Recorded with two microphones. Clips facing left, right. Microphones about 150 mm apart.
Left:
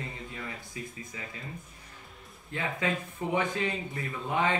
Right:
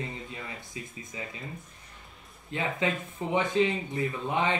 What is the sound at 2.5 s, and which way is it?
Speech, 20° right (ahead or behind).